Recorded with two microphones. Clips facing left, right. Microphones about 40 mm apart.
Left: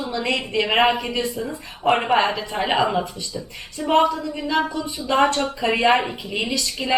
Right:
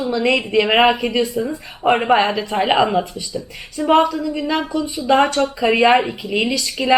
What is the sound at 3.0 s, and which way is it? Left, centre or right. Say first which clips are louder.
Speech: right 4 dB; centre.